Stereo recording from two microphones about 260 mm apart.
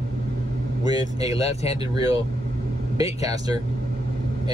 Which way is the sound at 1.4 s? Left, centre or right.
Left.